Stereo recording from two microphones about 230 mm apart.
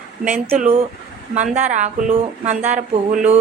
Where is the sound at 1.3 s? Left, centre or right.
Right.